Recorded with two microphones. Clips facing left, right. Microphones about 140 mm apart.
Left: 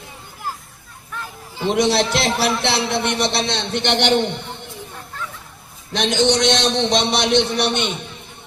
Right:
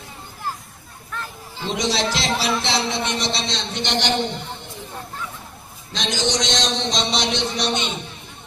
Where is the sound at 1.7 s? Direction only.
60° left (ahead or behind).